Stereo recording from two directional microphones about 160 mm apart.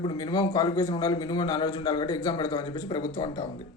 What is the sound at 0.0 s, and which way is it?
A man's voice, 30° left (ahead or behind).